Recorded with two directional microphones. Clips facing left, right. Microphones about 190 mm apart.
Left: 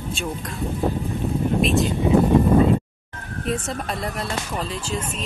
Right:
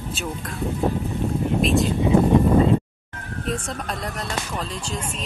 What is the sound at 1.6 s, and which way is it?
Speech, centre (ahead or behind).